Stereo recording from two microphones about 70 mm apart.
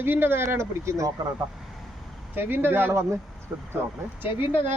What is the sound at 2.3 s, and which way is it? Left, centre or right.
Speech, right.